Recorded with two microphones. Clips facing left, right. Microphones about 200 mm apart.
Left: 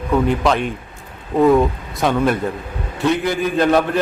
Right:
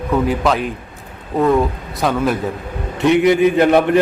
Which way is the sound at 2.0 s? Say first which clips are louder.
Even; centre (ahead or behind).